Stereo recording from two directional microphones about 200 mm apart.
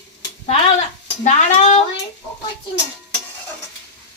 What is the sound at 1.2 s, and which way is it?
Speech, 30° left (ahead or behind).